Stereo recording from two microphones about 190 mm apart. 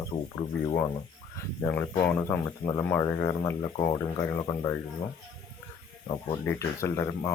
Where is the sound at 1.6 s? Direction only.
10° left (ahead or behind).